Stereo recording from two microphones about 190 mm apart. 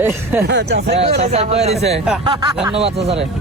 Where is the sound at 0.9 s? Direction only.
35° right (ahead or behind).